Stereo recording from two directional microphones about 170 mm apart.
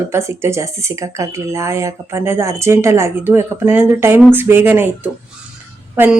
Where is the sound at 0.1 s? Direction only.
15° right (ahead or behind).